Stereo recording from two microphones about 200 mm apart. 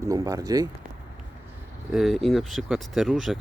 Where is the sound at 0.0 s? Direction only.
15° right (ahead or behind).